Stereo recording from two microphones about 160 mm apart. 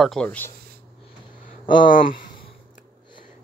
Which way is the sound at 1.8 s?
55° left (ahead or behind).